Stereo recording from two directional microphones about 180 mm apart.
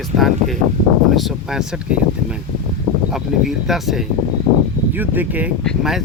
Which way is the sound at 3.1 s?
Centre (ahead or behind).